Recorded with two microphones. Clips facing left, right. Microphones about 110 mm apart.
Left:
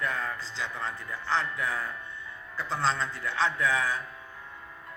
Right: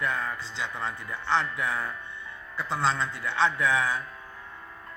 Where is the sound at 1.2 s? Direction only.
25° right (ahead or behind).